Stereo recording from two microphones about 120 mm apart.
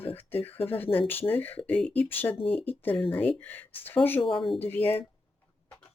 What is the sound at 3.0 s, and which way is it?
Speech, 45° left (ahead or behind).